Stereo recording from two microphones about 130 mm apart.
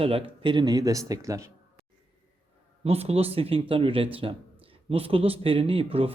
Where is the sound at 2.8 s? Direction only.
50° right (ahead or behind).